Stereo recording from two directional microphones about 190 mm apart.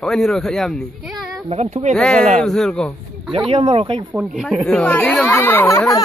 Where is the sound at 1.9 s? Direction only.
5° left (ahead or behind).